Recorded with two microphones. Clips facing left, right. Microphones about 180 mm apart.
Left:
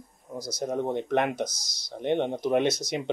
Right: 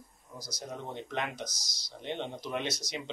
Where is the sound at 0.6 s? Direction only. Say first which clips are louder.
Left 12 dB; 55° left (ahead or behind).